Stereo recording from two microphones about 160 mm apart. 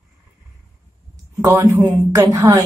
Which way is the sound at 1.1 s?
20° right (ahead or behind).